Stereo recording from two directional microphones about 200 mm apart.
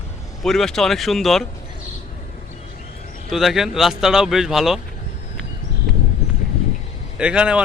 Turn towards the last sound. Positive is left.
turn(degrees=-5)  # may be behind; listen again after turning